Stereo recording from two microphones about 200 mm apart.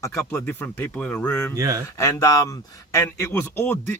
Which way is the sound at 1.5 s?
15° right (ahead or behind).